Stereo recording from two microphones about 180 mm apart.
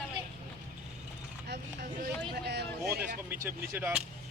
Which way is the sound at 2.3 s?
65° right (ahead or behind).